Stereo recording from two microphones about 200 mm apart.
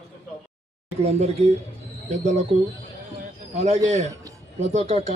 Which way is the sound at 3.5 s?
35° right (ahead or behind).